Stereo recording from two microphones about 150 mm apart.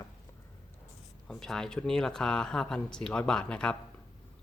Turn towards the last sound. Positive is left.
turn(degrees=5)  # may be behind; listen again after turning